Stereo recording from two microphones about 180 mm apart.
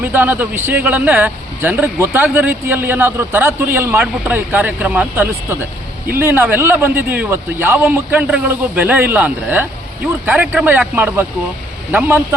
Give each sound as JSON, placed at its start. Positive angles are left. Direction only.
{"t": 0.0, "sound": "speech", "side_deg": -10}